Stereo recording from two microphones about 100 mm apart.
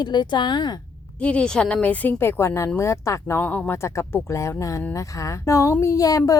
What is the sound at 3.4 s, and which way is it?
Speech, 15° left (ahead or behind).